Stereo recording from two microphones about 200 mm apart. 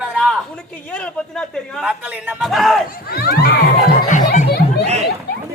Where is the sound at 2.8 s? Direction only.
45° left (ahead or behind).